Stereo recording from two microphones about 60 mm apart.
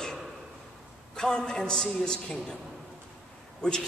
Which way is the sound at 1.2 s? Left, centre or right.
Centre.